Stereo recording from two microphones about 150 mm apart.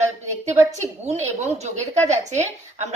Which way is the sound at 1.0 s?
45° right (ahead or behind).